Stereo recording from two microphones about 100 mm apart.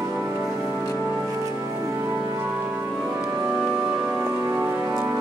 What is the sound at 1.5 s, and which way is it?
Music, 30° right (ahead or behind).